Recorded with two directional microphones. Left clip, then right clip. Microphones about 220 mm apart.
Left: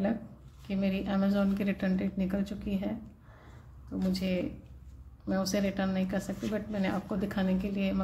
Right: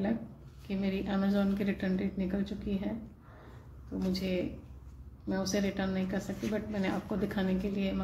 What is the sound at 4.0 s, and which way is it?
A woman's voice, 30° left (ahead or behind).